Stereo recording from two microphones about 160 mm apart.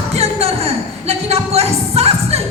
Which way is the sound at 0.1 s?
40° right (ahead or behind).